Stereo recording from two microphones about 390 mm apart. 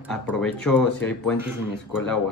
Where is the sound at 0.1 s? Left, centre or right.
Centre.